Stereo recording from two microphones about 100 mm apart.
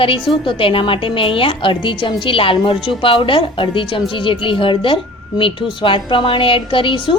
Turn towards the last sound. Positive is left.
turn(degrees=55)  # may be behind; listen again after turning